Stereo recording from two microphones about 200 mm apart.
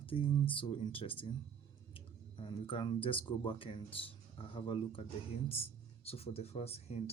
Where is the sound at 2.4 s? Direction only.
25° left (ahead or behind).